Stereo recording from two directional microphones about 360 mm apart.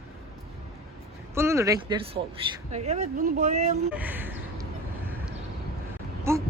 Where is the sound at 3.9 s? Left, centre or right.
Centre.